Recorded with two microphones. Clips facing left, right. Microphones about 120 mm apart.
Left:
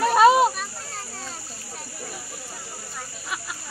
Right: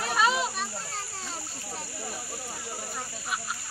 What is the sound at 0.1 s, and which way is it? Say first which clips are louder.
Children playing: left 10 dB; 50° left (ahead or behind).